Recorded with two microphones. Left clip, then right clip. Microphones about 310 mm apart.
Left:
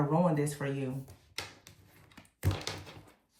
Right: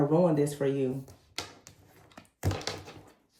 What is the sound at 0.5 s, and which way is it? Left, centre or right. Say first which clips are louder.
Speech: right 8 dB; centre.